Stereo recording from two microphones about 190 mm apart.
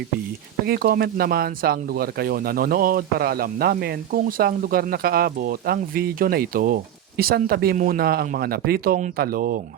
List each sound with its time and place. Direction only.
0.6 s speech: 55° right (ahead or behind)